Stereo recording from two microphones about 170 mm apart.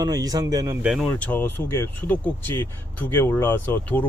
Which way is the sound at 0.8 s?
5° right (ahead or behind).